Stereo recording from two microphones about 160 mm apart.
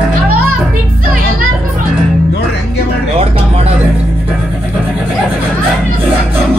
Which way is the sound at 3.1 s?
40° right (ahead or behind).